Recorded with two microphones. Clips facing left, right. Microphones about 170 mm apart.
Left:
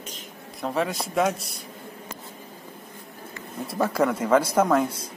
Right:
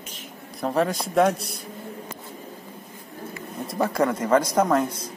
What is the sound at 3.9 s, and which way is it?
Speech, 5° left (ahead or behind).